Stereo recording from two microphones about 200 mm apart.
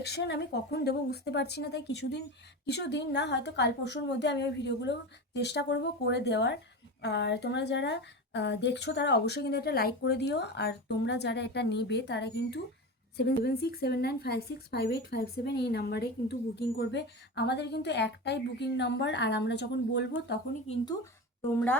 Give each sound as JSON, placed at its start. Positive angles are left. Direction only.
{"t": 0.0, "sound": "a woman's voice", "side_deg": 55}
{"t": 20.7, "sound": "speech", "side_deg": 35}